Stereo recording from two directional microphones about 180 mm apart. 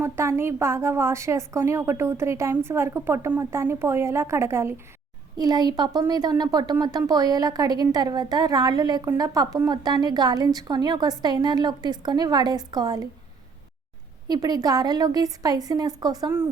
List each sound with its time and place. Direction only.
0.0 s a woman's voice: 15° right (ahead or behind)
14.3 s a woman's voice: 20° right (ahead or behind)